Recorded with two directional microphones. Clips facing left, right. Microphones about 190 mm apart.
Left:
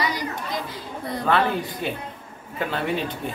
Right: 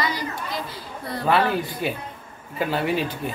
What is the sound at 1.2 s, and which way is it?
Speech, 5° right (ahead or behind).